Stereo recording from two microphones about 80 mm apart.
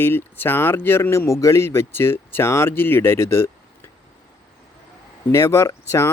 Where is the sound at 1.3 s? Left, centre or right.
Left.